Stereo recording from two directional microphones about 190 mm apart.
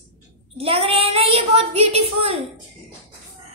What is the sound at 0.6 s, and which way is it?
A woman's voice, 30° right (ahead or behind).